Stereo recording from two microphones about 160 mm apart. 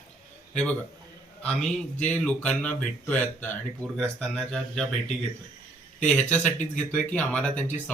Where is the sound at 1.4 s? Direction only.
5° left (ahead or behind).